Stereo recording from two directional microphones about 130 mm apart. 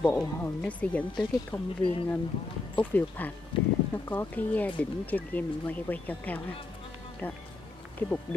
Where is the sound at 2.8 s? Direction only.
15° left (ahead or behind).